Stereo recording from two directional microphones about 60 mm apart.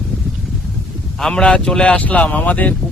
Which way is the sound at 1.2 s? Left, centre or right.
Centre.